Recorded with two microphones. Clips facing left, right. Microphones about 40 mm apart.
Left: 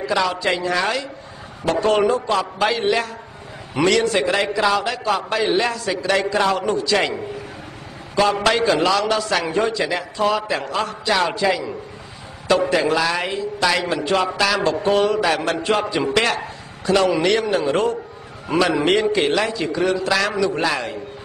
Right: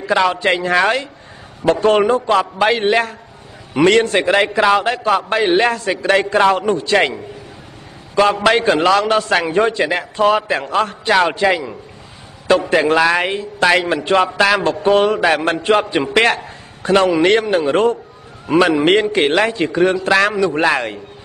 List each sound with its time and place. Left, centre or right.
0.0 s a man's voice: right
8.2 s a man's voice: right
18.5 s a man's voice: centre
19.1 s a man's voice: right